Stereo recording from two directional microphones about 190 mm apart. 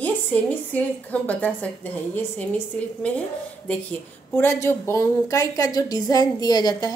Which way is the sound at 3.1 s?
5° left (ahead or behind).